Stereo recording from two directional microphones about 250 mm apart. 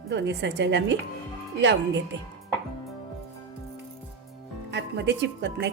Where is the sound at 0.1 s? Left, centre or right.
Right.